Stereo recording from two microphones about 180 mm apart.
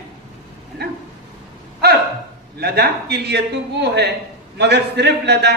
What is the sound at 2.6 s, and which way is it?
A man's voice, 65° right (ahead or behind).